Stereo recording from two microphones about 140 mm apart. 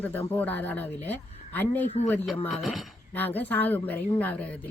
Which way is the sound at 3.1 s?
15° left (ahead or behind).